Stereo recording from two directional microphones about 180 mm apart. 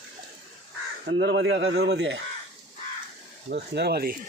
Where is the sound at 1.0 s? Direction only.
75° right (ahead or behind).